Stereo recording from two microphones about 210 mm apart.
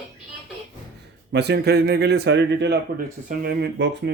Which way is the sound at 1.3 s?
50° right (ahead or behind).